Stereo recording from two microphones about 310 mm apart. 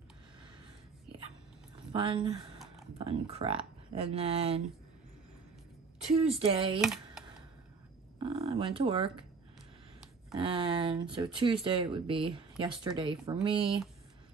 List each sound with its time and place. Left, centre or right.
1.9 s speech: centre
6.0 s speech: centre
6.8 s a sound: centre
8.2 s speech: centre
10.4 s speech: centre